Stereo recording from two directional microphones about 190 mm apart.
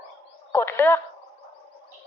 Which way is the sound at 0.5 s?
10° left (ahead or behind).